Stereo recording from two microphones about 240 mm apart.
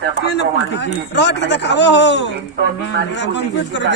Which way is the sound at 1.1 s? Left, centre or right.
Left.